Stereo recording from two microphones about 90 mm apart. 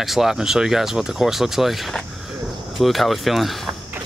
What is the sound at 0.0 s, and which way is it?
Speech, 5° right (ahead or behind).